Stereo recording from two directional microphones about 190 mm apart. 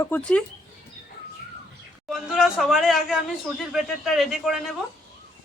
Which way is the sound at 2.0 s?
Centre (ahead or behind).